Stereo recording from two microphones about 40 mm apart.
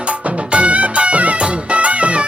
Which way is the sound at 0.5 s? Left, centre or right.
Right.